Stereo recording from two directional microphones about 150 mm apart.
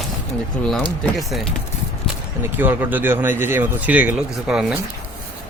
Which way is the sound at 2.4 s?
15° right (ahead or behind).